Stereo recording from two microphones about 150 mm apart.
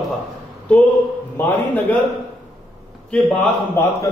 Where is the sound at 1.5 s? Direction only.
10° left (ahead or behind).